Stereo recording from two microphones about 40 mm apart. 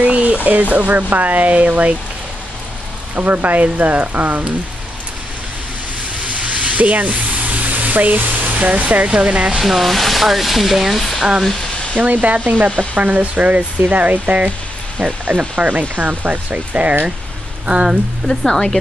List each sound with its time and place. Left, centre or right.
0.0 s speech: right
3.2 s speech: right
6.2 s a sound: right
9.6 s speech: centre
11.1 s speech: centre
12.0 s speech: right
16.7 s speech: right
18.2 s speech: centre